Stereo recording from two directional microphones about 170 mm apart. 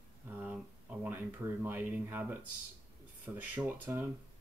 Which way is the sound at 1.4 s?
10° right (ahead or behind).